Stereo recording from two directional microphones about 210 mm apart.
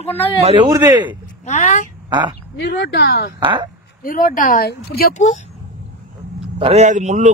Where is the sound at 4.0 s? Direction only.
40° left (ahead or behind).